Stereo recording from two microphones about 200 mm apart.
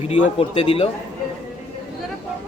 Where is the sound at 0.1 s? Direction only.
30° left (ahead or behind).